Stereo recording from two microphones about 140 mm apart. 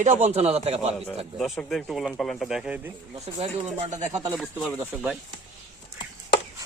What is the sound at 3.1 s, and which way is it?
Speech, 50° right (ahead or behind).